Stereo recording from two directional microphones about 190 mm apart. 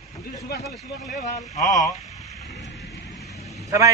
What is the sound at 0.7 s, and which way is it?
Speech, centre (ahead or behind).